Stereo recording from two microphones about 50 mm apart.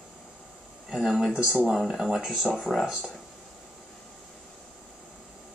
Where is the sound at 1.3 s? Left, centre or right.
Centre.